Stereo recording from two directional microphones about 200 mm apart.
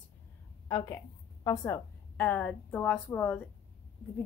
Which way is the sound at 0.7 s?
15° left (ahead or behind).